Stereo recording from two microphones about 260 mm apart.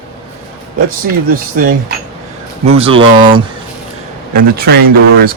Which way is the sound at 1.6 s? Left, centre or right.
Right.